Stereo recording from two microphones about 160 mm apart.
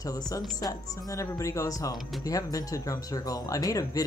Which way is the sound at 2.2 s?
20° left (ahead or behind).